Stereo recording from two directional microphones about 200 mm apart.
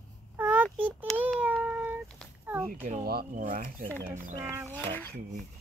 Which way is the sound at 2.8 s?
45° right (ahead or behind).